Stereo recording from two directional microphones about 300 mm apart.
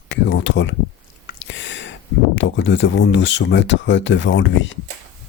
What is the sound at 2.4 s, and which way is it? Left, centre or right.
Speech, left.